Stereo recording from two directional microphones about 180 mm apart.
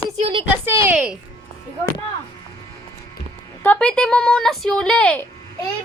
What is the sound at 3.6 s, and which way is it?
Speech, 5° left (ahead or behind).